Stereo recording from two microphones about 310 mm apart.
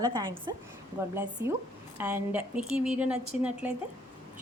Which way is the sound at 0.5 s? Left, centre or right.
Centre.